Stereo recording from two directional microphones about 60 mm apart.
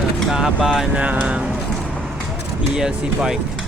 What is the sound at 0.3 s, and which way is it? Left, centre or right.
Speech, centre.